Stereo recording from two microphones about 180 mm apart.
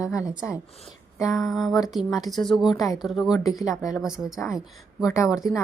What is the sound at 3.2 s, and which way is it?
Speech, 20° left (ahead or behind).